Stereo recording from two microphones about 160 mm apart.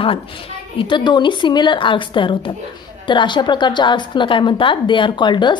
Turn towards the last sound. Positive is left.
turn(degrees=30)  # may be behind; listen again after turning